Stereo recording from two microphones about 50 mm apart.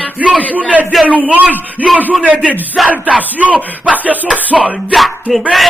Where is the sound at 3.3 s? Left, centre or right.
Right.